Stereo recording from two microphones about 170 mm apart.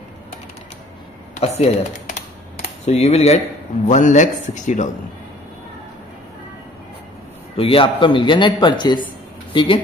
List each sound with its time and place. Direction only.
1.3 s computer keyboard: 40° left (ahead or behind)
3.8 s a man's voice: 45° left (ahead or behind)
7.5 s a man's voice: 35° left (ahead or behind)